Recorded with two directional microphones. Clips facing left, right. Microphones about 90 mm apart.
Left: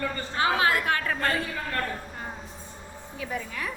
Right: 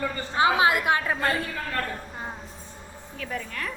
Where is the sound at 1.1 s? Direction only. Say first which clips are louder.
Right 1 dB; 5° right (ahead or behind).